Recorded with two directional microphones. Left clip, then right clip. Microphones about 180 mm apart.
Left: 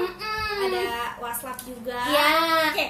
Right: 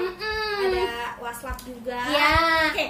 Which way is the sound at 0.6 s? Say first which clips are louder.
Right 2 dB; 10° left (ahead or behind).